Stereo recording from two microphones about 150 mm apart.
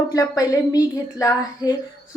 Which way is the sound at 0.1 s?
25° left (ahead or behind).